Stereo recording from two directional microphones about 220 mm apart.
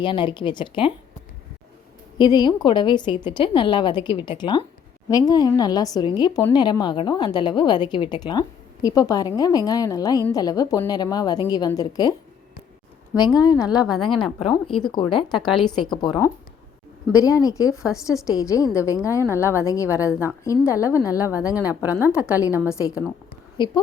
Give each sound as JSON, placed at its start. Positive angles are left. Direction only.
{"t": 0.0, "sound": "a woman's voice", "side_deg": 20}
{"t": 2.1, "sound": "a woman's voice", "side_deg": 20}
{"t": 13.1, "sound": "a woman's voice", "side_deg": 20}
{"t": 21.5, "sound": "a woman's voice", "side_deg": -5}
{"t": 22.3, "sound": "a woman's voice", "side_deg": 15}